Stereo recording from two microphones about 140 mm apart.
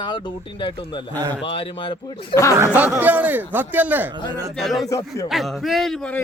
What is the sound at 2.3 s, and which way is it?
Speech, 20° left (ahead or behind).